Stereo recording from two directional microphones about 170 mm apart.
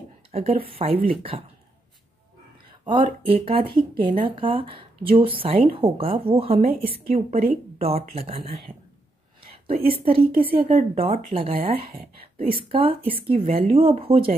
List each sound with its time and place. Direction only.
0.3 s speech: 35° right (ahead or behind)
2.8 s speech: 30° right (ahead or behind)
9.4 s a woman's voice: 35° right (ahead or behind)